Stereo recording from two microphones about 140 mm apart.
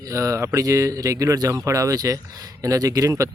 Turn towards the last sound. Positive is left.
turn(degrees=-25)  # may be behind; listen again after turning